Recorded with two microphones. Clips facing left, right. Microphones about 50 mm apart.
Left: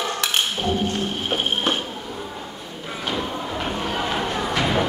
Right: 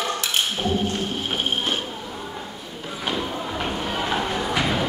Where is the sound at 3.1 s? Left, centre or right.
Centre.